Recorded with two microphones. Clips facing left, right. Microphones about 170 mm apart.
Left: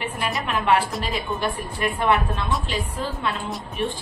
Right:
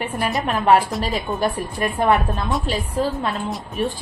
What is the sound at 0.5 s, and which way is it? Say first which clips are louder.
A woman's voice: right 4 dB; 40° right (ahead or behind).